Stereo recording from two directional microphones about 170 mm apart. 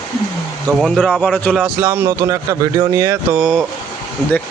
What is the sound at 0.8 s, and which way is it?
Speech, centre (ahead or behind).